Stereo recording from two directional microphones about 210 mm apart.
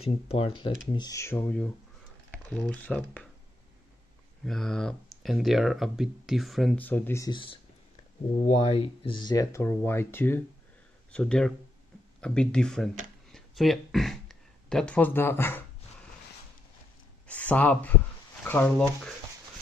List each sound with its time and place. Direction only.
0.0 s speech: 25° left (ahead or behind); by 3.3 s 5° left (ahead or behind)
4.5 s speech: centre (ahead or behind)
17.3 s speech: 5° left (ahead or behind)